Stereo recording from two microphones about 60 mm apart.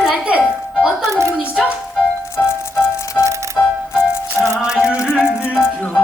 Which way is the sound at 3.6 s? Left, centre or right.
Left.